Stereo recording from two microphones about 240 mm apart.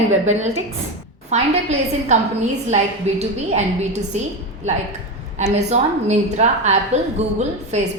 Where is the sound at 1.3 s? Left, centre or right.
Right.